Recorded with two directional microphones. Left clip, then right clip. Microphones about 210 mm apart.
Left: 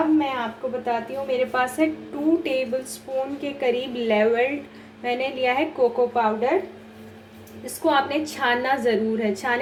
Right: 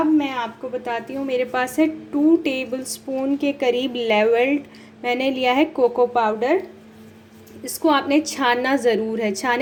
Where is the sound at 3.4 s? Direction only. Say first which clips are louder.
Right 5 dB; 35° right (ahead or behind).